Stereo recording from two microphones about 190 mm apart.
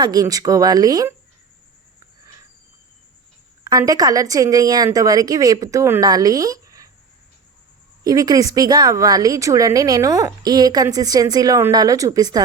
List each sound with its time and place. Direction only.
0.0 s a woman's voice: 20° right (ahead or behind)
3.6 s a woman's voice: 20° right (ahead or behind)
8.0 s a woman's voice: 20° right (ahead or behind)